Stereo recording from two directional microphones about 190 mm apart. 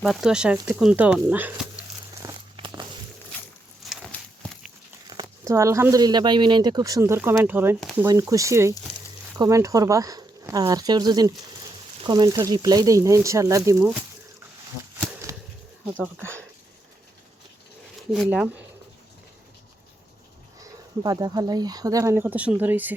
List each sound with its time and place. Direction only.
0.0 s speech: centre (ahead or behind)
2.2 s a sound: 25° right (ahead or behind)
3.8 s walk: 5° left (ahead or behind)
5.0 s speech: 20° right (ahead or behind)
15.3 s whip: 15° right (ahead or behind)
18.1 s speech: 5° right (ahead or behind)
21.0 s speech: 20° right (ahead or behind)